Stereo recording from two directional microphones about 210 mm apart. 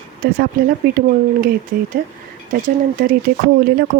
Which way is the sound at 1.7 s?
45° right (ahead or behind).